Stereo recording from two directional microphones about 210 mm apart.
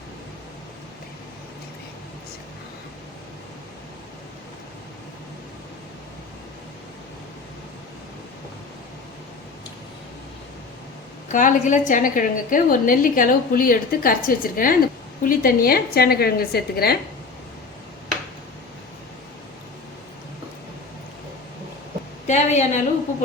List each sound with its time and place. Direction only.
11.3 s a woman's voice: 35° left (ahead or behind)
22.3 s a woman's voice: 35° left (ahead or behind)